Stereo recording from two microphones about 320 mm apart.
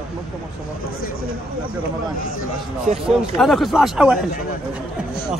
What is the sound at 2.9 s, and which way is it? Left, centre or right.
Speech, right.